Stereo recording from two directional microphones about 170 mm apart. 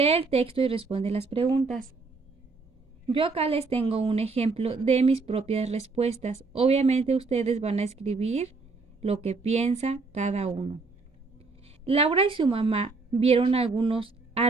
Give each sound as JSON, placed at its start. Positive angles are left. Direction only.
{"t": 0.0, "sound": "a woman's voice", "side_deg": -35}
{"t": 1.5, "sound": "speech", "side_deg": 15}
{"t": 3.1, "sound": "a woman's voice", "side_deg": -30}